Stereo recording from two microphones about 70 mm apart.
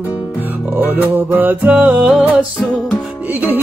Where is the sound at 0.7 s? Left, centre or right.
Right.